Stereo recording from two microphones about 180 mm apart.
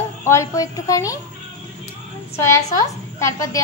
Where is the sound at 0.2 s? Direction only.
15° left (ahead or behind).